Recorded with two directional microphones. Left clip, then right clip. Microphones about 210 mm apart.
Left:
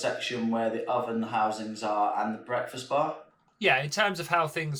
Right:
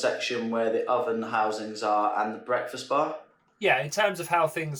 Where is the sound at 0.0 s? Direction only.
Centre (ahead or behind).